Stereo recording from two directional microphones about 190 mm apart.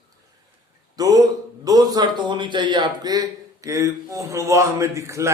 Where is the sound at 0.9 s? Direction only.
20° right (ahead or behind).